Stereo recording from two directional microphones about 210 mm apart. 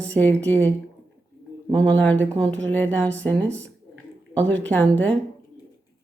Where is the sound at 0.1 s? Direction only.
5° left (ahead or behind).